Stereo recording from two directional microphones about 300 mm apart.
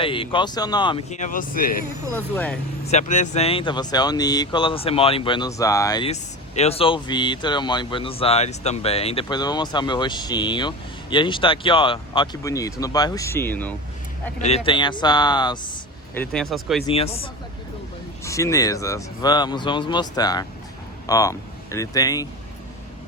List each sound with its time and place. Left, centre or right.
0.0 s speech: centre
2.1 s speech: centre
2.9 s speech: left; by 13.7 s centre
14.3 s speech: left
16.1 s speech: centre
16.8 s speech: centre
18.3 s speech: centre